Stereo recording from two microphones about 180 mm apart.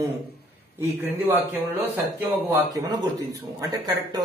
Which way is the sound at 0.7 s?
10° right (ahead or behind).